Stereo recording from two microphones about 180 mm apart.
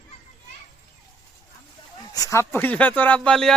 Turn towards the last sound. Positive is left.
turn(degrees=5)  # may be behind; listen again after turning